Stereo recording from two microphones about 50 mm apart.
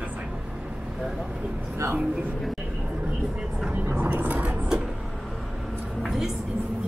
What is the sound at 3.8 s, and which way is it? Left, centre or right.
Vehicle, right.